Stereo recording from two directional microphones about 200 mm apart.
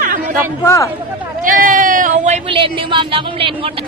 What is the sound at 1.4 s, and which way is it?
Speech, 45° right (ahead or behind).